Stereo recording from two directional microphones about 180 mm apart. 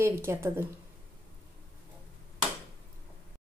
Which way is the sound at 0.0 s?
15° right (ahead or behind).